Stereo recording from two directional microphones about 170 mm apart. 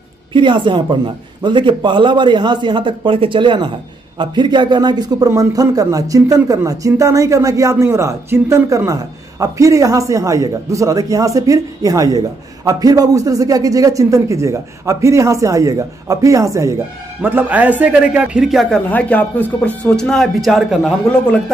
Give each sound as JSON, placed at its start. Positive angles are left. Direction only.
{"t": 0.3, "sound": "a man's voice", "side_deg": -30}